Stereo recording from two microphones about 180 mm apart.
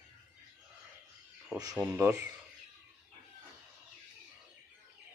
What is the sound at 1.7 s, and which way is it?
Speech, 10° right (ahead or behind).